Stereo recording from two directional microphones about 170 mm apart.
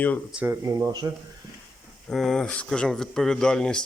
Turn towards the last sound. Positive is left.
turn(degrees=5)  # may be behind; listen again after turning